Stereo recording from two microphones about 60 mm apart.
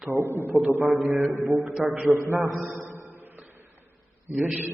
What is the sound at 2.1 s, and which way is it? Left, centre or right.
Speech, right.